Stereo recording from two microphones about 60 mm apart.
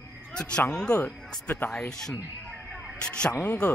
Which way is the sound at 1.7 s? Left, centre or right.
Centre.